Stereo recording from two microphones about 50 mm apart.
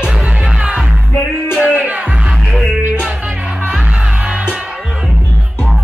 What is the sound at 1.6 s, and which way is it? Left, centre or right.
Music, right.